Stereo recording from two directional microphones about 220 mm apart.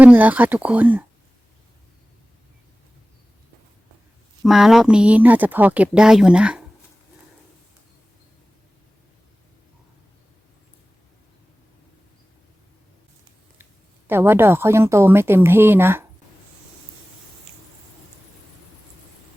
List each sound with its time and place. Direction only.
0.0 s a woman's voice: 5° right (ahead or behind)
4.4 s speech: centre (ahead or behind)
14.1 s a woman's voice: 10° right (ahead or behind)